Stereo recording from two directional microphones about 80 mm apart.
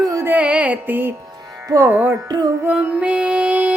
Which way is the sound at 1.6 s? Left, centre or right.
Right.